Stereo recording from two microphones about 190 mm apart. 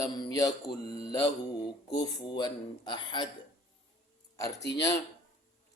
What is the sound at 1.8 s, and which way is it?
A man's voice, 20° left (ahead or behind).